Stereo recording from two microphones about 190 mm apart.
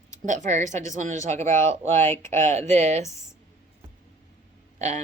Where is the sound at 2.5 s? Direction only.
35° right (ahead or behind).